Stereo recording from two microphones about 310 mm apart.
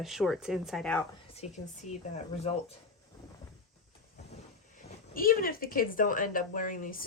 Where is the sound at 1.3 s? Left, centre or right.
Left.